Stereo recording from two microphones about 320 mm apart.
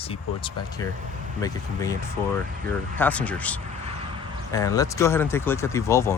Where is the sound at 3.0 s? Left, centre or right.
Centre.